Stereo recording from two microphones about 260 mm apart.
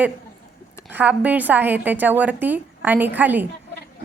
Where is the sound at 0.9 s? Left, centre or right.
Centre.